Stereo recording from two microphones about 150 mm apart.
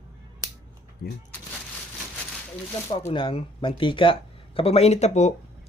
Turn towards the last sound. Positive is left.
turn(degrees=50)  # may be behind; listen again after turning